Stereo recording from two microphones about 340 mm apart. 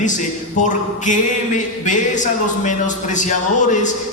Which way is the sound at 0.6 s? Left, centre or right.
Left.